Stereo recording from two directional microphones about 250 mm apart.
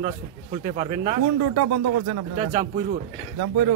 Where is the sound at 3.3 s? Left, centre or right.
Right.